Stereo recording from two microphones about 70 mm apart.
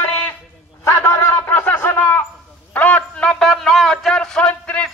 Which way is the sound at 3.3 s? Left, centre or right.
Centre.